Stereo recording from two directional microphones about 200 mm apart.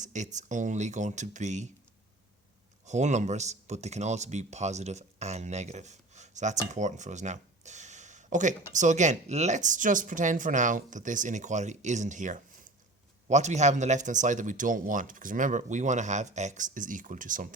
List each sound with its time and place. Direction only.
0.0 s speech: 35° right (ahead or behind)
2.8 s speech: 35° right (ahead or behind)